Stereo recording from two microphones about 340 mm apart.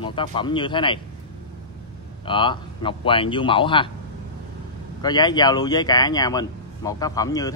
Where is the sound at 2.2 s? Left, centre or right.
Centre.